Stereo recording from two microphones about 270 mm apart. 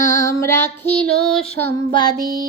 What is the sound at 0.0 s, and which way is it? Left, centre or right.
Child singing, centre.